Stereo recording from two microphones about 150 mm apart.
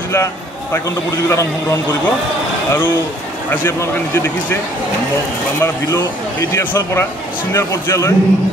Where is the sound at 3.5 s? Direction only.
15° left (ahead or behind).